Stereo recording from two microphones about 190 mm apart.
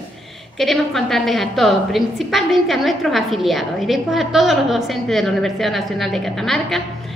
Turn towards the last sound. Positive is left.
turn(degrees=0)  # may be behind; listen again after turning